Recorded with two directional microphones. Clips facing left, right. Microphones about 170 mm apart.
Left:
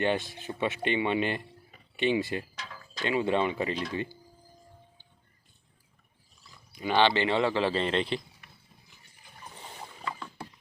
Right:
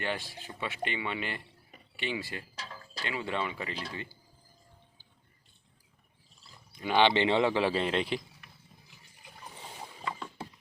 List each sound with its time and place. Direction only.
0.0 s speech: 20° left (ahead or behind)
2.6 s a sound: 30° right (ahead or behind)
3.0 s speech: 20° left (ahead or behind)
6.9 s speech: 20° right (ahead or behind)